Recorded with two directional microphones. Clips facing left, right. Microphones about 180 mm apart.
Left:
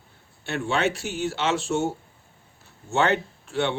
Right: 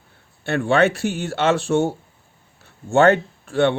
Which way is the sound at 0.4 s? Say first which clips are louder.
Right 7 dB; 55° right (ahead or behind).